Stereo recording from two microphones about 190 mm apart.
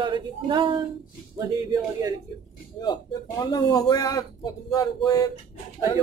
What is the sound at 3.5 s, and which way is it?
Speech, 20° left (ahead or behind).